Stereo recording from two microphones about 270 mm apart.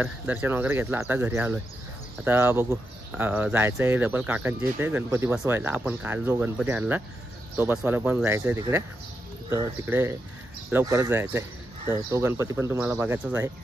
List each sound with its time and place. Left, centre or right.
0.0 s speech: centre